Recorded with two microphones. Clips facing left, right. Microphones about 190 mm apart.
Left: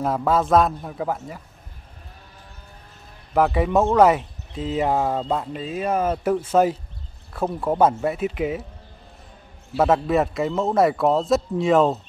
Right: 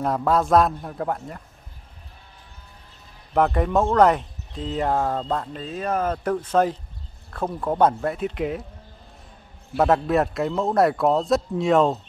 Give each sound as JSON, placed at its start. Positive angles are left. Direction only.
{"t": 0.0, "sound": "a man's voice", "side_deg": 0}
{"t": 3.3, "sound": "a man's voice", "side_deg": 5}
{"t": 9.8, "sound": "a man's voice", "side_deg": 0}